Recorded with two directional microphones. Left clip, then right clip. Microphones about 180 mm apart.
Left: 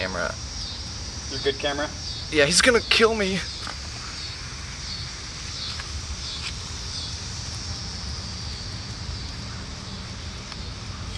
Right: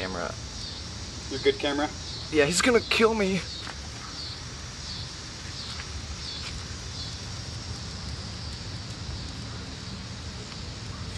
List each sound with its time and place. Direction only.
0.0 s a sound: 5° left (ahead or behind)
1.4 s speech: 20° right (ahead or behind)
2.3 s speech: centre (ahead or behind)